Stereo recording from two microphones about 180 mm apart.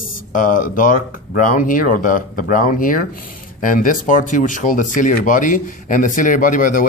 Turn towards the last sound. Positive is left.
turn(degrees=50)  # may be behind; listen again after turning